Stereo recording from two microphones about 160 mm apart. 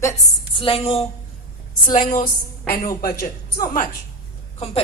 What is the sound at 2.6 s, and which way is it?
Speech, 65° left (ahead or behind).